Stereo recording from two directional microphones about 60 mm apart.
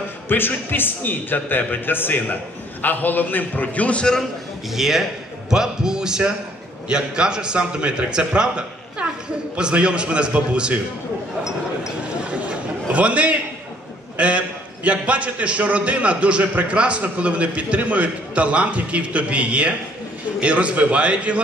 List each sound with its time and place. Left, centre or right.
0.3 s a man's voice: left; by 4.2 s centre
4.2 s a man's voice: centre; by 10.8 s right
12.2 s a sound: centre
14.1 s a man's voice: right